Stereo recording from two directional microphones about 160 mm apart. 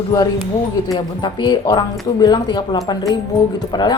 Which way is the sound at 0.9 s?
30° left (ahead or behind).